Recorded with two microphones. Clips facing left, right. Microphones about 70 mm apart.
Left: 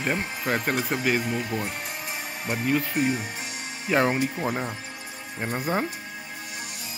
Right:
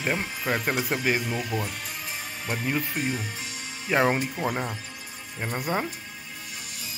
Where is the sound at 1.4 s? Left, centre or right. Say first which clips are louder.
Left 1 dB; left.